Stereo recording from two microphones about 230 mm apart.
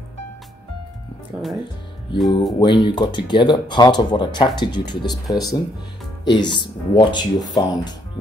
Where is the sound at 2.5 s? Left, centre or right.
Centre.